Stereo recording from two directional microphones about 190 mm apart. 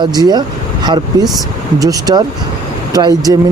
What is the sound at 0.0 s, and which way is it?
Speech, 20° right (ahead or behind).